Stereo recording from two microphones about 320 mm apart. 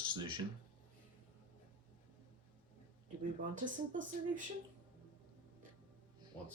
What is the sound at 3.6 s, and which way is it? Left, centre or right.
Speech, right.